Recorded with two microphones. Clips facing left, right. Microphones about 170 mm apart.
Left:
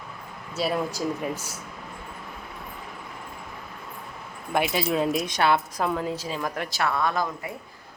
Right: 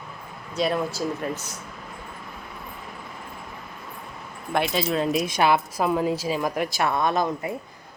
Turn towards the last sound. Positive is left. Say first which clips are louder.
# right 3 dB
turn(degrees=-20)  # may be behind; listen again after turning